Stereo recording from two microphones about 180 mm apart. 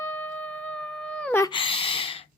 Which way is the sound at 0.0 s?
10° left (ahead or behind).